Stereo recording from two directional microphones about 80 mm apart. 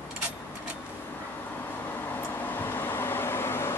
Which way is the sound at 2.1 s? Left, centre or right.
Left.